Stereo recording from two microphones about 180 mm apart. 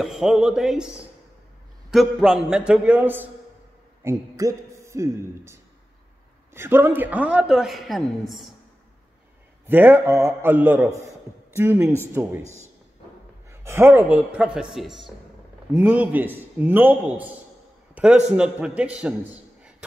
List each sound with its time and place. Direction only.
0.0 s a man's voice: 5° right (ahead or behind)
9.7 s a woman's voice: 10° right (ahead or behind)
12.4 s a man's voice: 15° left (ahead or behind)
13.5 s a woman's voice: 15° right (ahead or behind)